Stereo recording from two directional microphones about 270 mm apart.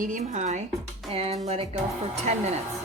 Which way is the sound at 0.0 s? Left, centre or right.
Right.